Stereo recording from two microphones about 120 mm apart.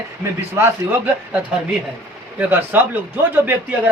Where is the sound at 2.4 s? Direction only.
15° right (ahead or behind).